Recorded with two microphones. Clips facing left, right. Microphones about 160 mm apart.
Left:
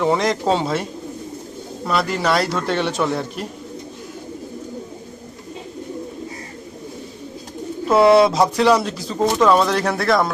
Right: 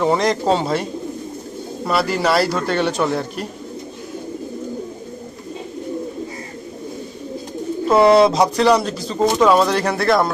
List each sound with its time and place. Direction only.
0.0 s speech: centre (ahead or behind)
7.9 s speech: centre (ahead or behind)